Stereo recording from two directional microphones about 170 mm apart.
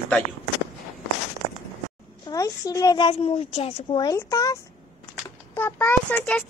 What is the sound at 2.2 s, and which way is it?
A woman's voice, 20° left (ahead or behind).